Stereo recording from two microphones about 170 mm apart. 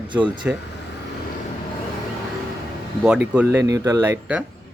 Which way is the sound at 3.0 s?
5° right (ahead or behind).